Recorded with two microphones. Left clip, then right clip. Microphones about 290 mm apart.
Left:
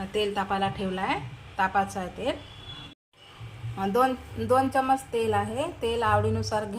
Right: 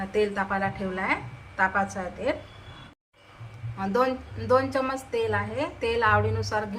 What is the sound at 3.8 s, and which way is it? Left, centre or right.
A woman's voice, left.